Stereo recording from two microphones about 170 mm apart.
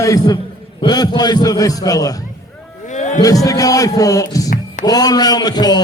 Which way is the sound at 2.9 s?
45° left (ahead or behind).